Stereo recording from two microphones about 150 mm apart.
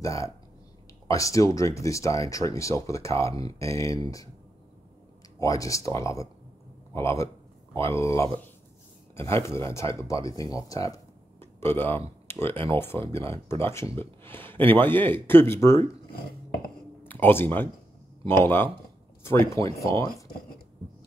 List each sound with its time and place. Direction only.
0.0 s speech: 20° left (ahead or behind)
5.4 s a man's voice: 20° left (ahead or behind)
17.0 s speech: 15° left (ahead or behind)